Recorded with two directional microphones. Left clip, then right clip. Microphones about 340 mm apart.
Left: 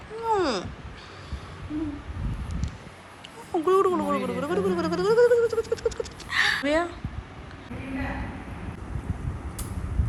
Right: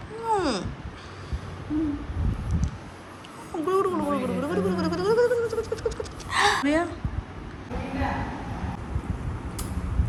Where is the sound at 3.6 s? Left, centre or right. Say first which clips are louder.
Left 2 dB; centre.